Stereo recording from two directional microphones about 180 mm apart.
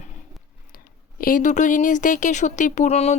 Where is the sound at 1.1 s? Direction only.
50° left (ahead or behind).